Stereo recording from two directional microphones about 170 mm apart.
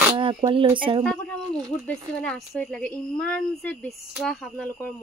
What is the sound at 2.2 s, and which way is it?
Speech, 5° left (ahead or behind).